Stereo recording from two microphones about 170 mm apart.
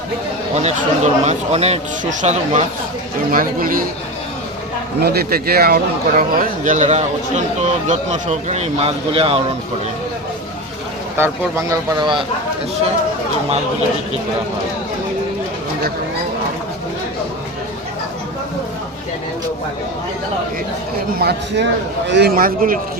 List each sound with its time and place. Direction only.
0.5 s speech: 40° right (ahead or behind)
3.3 s a man's voice: 55° right (ahead or behind)
4.9 s speech: 70° right (ahead or behind); by 9.4 s 35° right (ahead or behind)
11.2 s speech: 20° right (ahead or behind)
21.2 s a man's voice: 70° right (ahead or behind); by 22.8 s 55° right (ahead or behind)